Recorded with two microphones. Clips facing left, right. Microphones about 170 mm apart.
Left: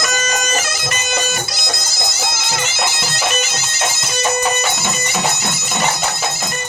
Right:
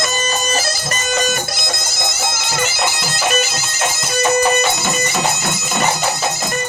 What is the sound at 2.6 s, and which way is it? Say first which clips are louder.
Bagpipes: right 4 dB; 45° right (ahead or behind).